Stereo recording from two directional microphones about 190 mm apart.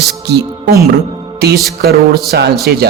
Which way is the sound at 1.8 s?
55° right (ahead or behind).